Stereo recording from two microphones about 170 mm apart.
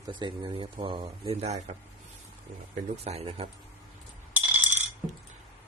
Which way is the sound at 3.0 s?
35° right (ahead or behind).